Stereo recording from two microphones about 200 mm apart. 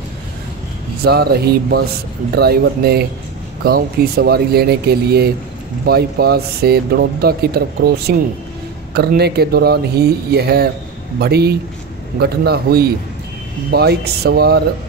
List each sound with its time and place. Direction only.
1.0 s speech: 50° right (ahead or behind)